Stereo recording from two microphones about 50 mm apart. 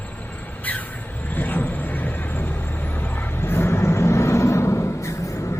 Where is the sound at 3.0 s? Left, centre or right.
Left.